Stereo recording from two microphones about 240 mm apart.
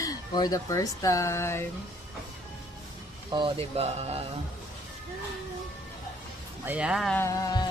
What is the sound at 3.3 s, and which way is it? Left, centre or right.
Speech, centre.